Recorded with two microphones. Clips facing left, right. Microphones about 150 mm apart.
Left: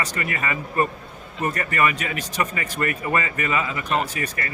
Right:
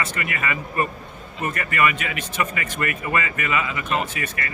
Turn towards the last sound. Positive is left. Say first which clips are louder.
# left 1 dB
turn(degrees=35)  # may be behind; listen again after turning